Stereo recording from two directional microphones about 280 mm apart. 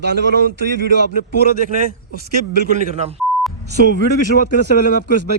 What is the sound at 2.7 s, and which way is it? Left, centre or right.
Speech, right.